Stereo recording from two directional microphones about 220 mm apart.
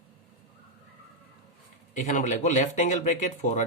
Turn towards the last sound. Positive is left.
turn(degrees=35)  # may be behind; listen again after turning